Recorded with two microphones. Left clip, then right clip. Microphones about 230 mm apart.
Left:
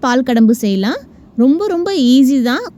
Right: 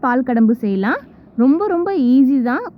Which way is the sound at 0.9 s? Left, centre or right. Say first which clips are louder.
Right 1 dB; left.